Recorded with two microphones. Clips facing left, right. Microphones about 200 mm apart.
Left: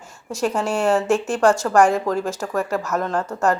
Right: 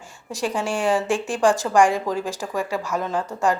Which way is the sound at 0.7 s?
15° right (ahead or behind).